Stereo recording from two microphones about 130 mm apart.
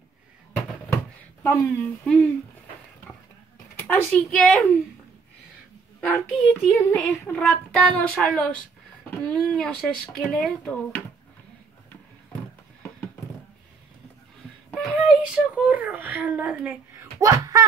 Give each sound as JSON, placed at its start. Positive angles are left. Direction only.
{"t": 1.4, "sound": "speech", "side_deg": 20}
{"t": 2.0, "sound": "speech", "side_deg": 5}
{"t": 3.8, "sound": "speech", "side_deg": 10}
{"t": 5.9, "sound": "speech", "side_deg": 15}
{"t": 14.7, "sound": "a sound", "side_deg": 0}
{"t": 15.0, "sound": "a child's voice", "side_deg": -10}
{"t": 17.2, "sound": "speech", "side_deg": -25}